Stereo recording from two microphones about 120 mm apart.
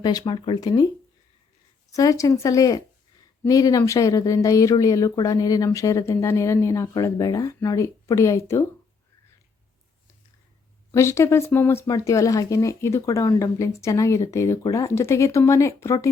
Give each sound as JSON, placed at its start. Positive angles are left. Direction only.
{"t": 0.0, "sound": "speech", "side_deg": 35}
{"t": 1.9, "sound": "speech", "side_deg": 30}
{"t": 10.9, "sound": "speech", "side_deg": 25}